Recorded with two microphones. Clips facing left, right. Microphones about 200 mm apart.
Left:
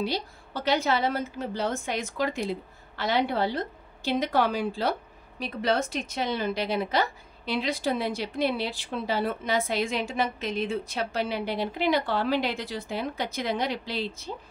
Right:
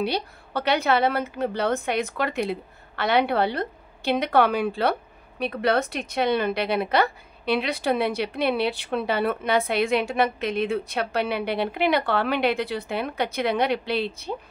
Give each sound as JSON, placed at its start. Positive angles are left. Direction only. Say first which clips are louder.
{"t": 0.0, "sound": "a woman's voice", "louder": "right 3 dB", "side_deg": -65}